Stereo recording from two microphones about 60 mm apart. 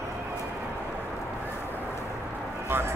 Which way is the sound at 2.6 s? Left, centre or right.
Right.